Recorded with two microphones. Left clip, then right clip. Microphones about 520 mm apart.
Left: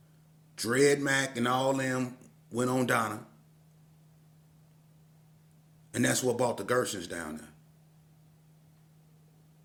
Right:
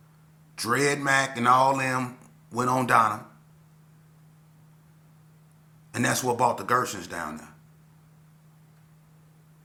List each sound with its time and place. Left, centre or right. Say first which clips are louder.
0.5 s speech: right 1 dB; left
5.9 s speech: right 3 dB; left